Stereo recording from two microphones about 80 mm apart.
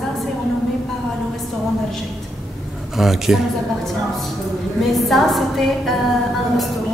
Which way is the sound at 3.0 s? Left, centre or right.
Centre.